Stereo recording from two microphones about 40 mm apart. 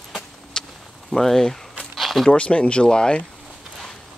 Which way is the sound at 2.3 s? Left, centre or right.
Left.